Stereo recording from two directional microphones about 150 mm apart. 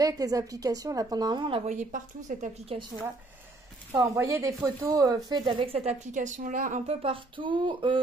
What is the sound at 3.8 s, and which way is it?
A woman's voice, 20° right (ahead or behind).